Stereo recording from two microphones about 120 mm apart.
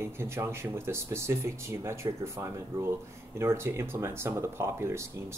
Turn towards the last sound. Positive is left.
turn(degrees=-25)  # may be behind; listen again after turning